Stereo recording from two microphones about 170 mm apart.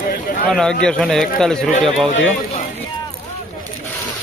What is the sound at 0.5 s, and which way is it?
Speech, 5° left (ahead or behind).